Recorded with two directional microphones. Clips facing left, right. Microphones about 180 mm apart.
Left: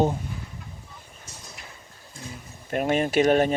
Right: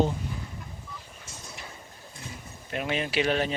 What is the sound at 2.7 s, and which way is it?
Speech, 50° left (ahead or behind).